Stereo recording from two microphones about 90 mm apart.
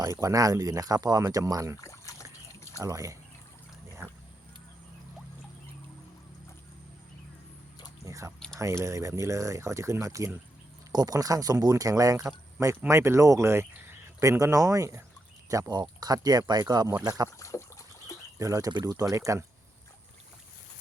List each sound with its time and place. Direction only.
0.0 s speech: 40° right (ahead or behind)
1.8 s a sound: 35° left (ahead or behind)
2.8 s speech: 40° right (ahead or behind)
8.0 s a sound: 35° right (ahead or behind)
8.5 s speech: 30° right (ahead or behind)
17.4 s a sound: 35° left (ahead or behind)
18.3 s speech: 40° right (ahead or behind)
18.7 s speech: 55° right (ahead or behind)
19.1 s speech: 35° right (ahead or behind)